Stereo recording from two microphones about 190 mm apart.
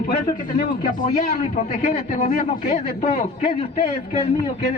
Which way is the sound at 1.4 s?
40° left (ahead or behind).